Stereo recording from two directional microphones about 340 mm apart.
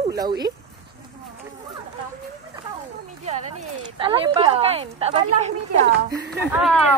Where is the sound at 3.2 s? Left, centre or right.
Centre.